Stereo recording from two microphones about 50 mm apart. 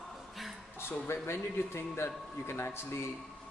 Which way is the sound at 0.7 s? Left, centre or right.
Left.